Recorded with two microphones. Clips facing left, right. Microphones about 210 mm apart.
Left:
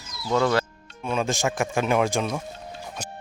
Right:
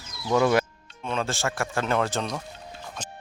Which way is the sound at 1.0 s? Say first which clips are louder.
Left 3 dB; 10° left (ahead or behind).